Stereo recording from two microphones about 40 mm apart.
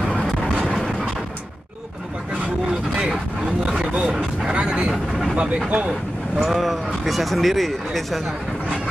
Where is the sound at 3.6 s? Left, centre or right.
Right.